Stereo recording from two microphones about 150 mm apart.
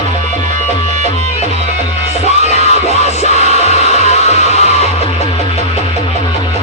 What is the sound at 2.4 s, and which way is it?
Music, 50° left (ahead or behind).